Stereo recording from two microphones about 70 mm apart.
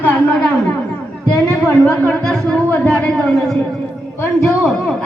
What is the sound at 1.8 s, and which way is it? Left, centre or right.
Speech, centre.